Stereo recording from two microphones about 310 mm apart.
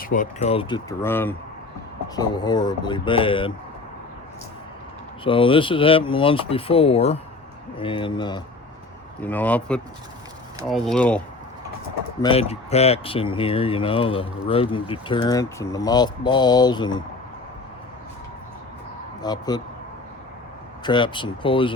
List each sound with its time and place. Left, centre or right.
0.0 s speech: left
5.2 s speech: centre
12.2 s speech: centre
19.2 s speech: centre
20.8 s speech: centre